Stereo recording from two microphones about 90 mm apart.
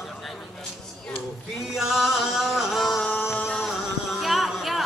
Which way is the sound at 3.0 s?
20° left (ahead or behind).